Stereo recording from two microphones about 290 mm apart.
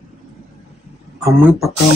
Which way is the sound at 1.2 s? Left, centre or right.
Centre.